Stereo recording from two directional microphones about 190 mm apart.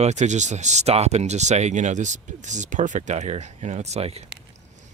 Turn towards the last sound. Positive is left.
turn(degrees=-35)  # may be behind; listen again after turning